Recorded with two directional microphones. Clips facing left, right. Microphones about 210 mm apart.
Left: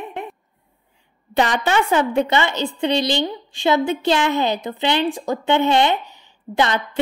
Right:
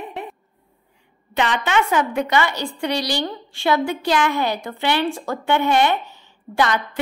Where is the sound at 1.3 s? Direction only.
35° left (ahead or behind).